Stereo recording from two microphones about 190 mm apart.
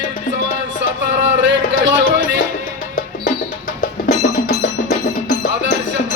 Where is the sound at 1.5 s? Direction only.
70° right (ahead or behind).